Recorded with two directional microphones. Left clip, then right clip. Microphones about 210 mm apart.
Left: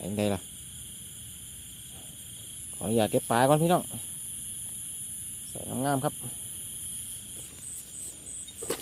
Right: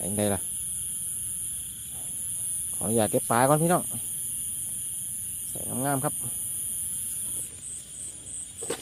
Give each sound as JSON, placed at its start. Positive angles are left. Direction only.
{"t": 0.0, "sound": "speech", "side_deg": 5}
{"t": 2.7, "sound": "speech", "side_deg": 5}
{"t": 5.5, "sound": "speech", "side_deg": 5}